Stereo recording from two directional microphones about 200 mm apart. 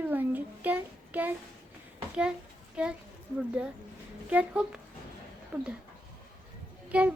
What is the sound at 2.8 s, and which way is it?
Speech, 5° right (ahead or behind).